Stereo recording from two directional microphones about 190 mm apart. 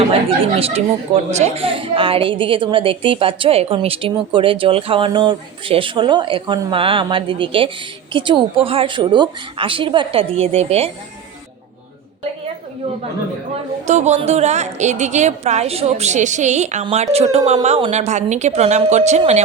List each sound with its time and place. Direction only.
0.6 s a woman's voice: 35° right (ahead or behind)
13.8 s a woman's voice: 35° right (ahead or behind)